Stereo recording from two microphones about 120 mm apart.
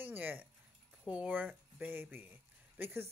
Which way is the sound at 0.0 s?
15° right (ahead or behind).